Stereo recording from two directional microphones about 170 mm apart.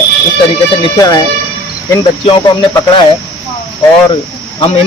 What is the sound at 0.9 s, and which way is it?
Speech, 20° left (ahead or behind).